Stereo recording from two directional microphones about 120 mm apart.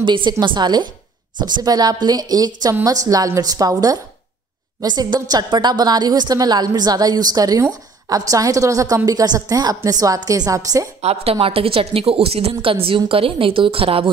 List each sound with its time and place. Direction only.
0.0 s a woman's voice: 40° right (ahead or behind)
11.0 s a woman's voice: 60° right (ahead or behind)
11.3 s a woman's voice: 50° right (ahead or behind)